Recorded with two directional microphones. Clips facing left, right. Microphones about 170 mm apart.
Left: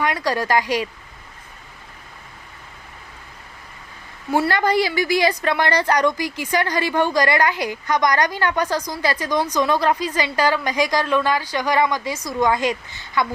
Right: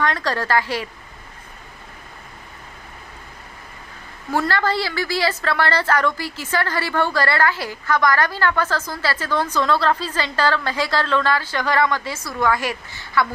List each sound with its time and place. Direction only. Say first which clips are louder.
0.0 s a woman's voice: left 1 dB; 10° left (ahead or behind)
4.3 s a woman's voice: left 2 dB; 15° left (ahead or behind)